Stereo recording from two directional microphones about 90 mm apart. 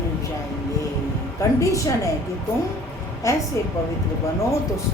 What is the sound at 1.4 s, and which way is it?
Speech, 35° left (ahead or behind).